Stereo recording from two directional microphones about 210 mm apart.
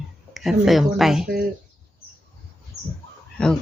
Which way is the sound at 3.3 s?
5° left (ahead or behind).